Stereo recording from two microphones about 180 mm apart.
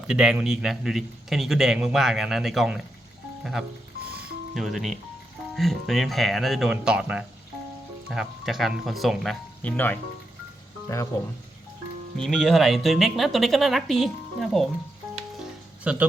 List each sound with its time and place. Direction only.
0.1 s a man's voice: 5° right (ahead or behind)
4.5 s a man's voice: centre (ahead or behind); by 11.1 s 15° left (ahead or behind)
12.1 s a man's voice: 5° left (ahead or behind)
15.8 s speech: 5° right (ahead or behind)